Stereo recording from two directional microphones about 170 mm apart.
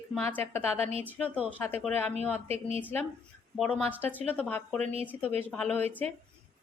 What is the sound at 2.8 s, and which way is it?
A woman's voice, 10° left (ahead or behind).